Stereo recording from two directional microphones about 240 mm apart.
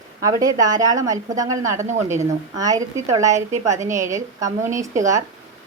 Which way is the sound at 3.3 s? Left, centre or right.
Right.